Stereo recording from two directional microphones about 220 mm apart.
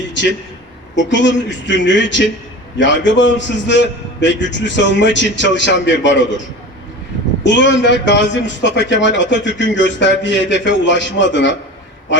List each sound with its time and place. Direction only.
0.1 s a man's voice: 55° left (ahead or behind)
7.4 s a man's voice: 55° left (ahead or behind)